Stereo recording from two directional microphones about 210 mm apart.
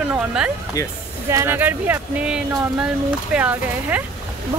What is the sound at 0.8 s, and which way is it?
Speech, 15° left (ahead or behind).